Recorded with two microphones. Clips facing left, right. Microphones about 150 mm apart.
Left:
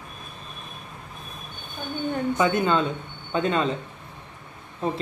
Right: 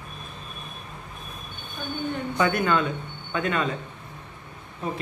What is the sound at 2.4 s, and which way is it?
Speech, 20° left (ahead or behind).